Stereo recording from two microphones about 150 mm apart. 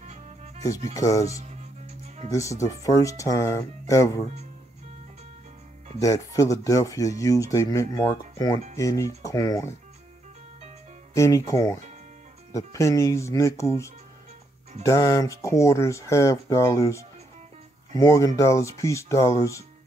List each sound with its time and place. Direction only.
0.0 s music: 50° right (ahead or behind)
0.9 s speech: 20° left (ahead or behind)
1.3 s music: 45° right (ahead or behind)
2.3 s speech: 20° left (ahead or behind)
5.9 s speech: 20° left (ahead or behind)
11.1 s speech: 20° left (ahead or behind)